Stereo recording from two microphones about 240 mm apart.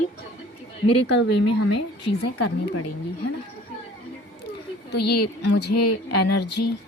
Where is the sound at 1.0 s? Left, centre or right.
Left.